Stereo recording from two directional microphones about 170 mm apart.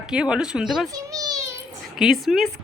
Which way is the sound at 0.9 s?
20° right (ahead or behind).